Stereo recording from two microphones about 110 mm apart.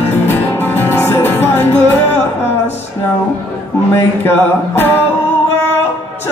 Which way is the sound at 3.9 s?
20° left (ahead or behind).